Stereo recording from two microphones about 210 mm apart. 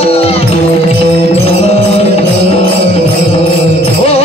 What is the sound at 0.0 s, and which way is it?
Music, 30° left (ahead or behind).